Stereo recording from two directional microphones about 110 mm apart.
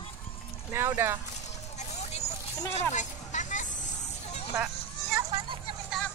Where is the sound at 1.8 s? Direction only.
90° left.